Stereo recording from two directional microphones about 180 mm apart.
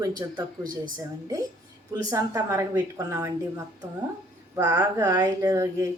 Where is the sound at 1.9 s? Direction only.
20° right (ahead or behind).